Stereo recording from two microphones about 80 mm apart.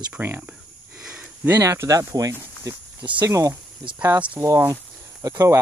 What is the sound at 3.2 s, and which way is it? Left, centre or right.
Speech, right.